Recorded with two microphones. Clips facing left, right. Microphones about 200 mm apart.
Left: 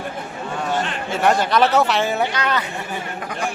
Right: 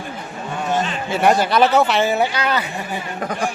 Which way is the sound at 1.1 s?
5° right (ahead or behind).